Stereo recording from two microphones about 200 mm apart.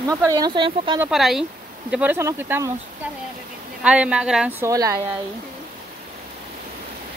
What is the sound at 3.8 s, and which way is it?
Speech, 5° right (ahead or behind).